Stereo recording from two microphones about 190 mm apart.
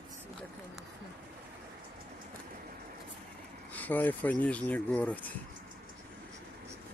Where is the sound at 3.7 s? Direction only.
10° left (ahead or behind).